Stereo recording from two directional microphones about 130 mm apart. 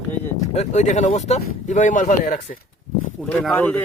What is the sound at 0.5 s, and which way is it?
Speech, 60° left (ahead or behind).